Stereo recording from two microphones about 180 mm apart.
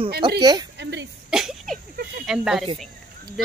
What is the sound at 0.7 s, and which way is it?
Throat clearing, 75° right (ahead or behind).